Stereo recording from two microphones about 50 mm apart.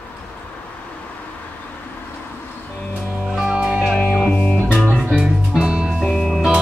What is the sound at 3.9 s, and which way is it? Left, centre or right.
Music, left.